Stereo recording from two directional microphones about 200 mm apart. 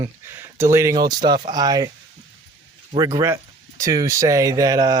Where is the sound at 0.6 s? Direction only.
15° right (ahead or behind).